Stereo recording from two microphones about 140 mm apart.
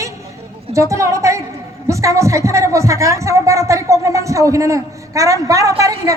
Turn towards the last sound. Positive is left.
turn(degrees=-25)  # may be behind; listen again after turning